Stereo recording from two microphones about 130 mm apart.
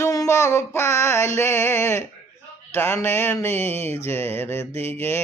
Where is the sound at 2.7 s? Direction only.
20° left (ahead or behind).